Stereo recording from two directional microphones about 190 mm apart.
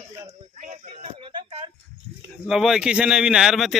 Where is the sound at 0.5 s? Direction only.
40° right (ahead or behind).